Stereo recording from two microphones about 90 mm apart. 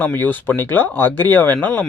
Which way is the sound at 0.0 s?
20° left (ahead or behind).